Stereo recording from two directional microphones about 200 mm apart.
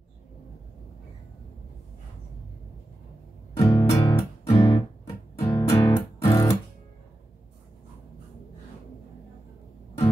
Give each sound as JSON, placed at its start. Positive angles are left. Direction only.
{"t": 3.5, "sound": "music", "side_deg": 15}